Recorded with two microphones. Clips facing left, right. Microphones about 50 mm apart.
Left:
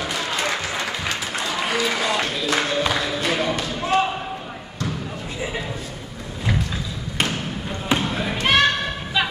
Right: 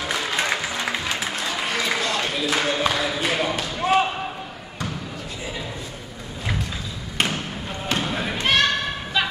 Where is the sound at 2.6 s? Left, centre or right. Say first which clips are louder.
Even; centre.